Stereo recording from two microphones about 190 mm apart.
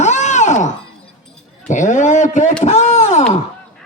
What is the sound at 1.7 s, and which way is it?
Speech, 40° left (ahead or behind).